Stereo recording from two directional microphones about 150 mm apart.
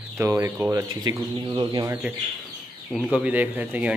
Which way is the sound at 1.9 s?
10° right (ahead or behind).